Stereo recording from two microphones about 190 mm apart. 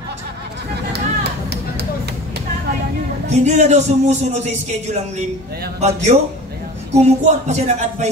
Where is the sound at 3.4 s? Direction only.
35° right (ahead or behind).